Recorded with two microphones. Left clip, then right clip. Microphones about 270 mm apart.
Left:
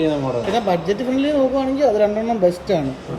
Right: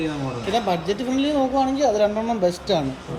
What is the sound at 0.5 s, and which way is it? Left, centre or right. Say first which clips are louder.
Speech: left 1 dB; centre.